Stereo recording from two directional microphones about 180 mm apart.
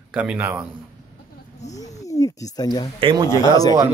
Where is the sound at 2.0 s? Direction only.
20° left (ahead or behind).